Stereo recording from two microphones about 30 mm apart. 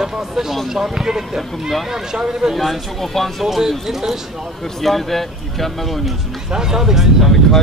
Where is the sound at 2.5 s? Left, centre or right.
Centre.